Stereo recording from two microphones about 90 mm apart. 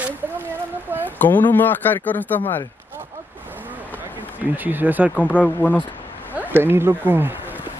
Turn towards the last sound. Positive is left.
turn(degrees=-25)  # may be behind; listen again after turning